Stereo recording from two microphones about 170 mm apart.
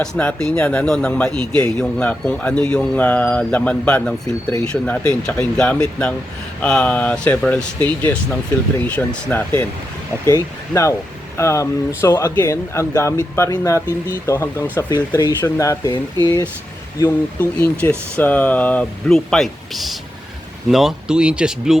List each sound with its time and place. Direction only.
0.0 s speech: 5° left (ahead or behind)
17.4 s speech: 10° left (ahead or behind)